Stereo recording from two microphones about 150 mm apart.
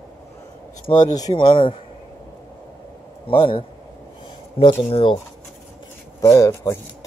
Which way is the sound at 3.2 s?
35° left (ahead or behind).